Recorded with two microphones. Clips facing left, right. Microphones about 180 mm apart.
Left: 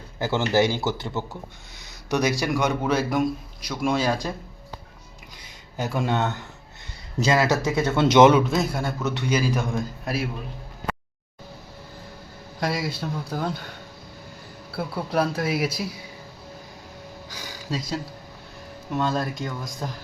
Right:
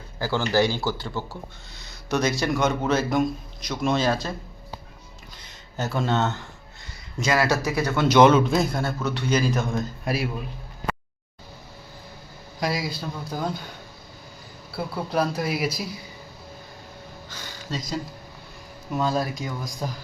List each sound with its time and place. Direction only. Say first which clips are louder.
0.2 s a man's voice: left 1 dB; 20° left (ahead or behind)
5.7 s a man's voice: even; 10° left (ahead or behind)
8.4 s a man's voice: right 1 dB; centre (ahead or behind)
10.0 s a man's voice: right 1 dB; centre (ahead or behind)
12.5 s speech: even; centre (ahead or behind)
14.8 s speech: left 1 dB; 5° left (ahead or behind)
17.3 s speech: left 2 dB; 10° left (ahead or behind)